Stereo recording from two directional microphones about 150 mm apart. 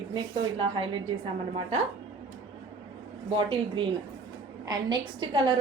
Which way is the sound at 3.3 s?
40° right (ahead or behind).